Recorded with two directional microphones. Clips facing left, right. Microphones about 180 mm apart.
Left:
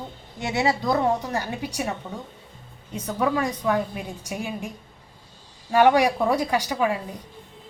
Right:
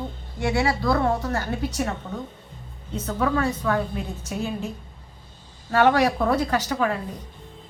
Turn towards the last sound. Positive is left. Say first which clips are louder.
# even
turn(degrees=10)  # may be behind; listen again after turning